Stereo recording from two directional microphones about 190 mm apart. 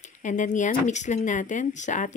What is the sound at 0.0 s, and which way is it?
Speech, 40° left (ahead or behind).